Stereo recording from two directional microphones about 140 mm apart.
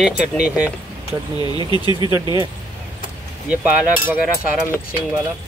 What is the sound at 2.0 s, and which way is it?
Speech, 30° right (ahead or behind).